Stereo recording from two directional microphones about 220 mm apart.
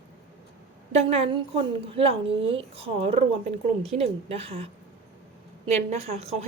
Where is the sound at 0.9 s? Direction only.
30° right (ahead or behind).